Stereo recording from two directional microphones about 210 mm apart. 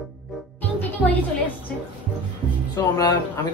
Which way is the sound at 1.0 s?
Centre (ahead or behind).